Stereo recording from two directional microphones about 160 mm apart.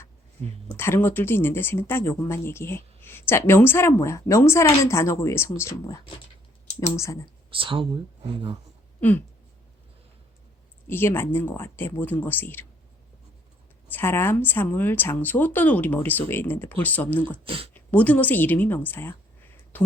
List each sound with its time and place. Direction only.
0.8 s speech: 15° left (ahead or behind)
7.5 s speech: 35° right (ahead or behind)
9.0 s a sound: 10° left (ahead or behind)
10.8 s speech: 15° left (ahead or behind)
13.9 s speech: 15° left (ahead or behind)
17.4 s speech: 35° right (ahead or behind)
17.7 s a woman's voice: 10° left (ahead or behind)